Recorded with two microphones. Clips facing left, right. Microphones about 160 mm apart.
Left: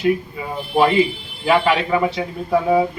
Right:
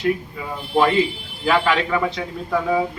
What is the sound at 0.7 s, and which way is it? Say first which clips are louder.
Speech: left 2 dB; 15° left (ahead or behind).